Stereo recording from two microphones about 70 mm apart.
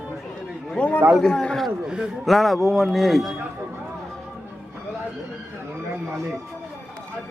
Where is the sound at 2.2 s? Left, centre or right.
Centre.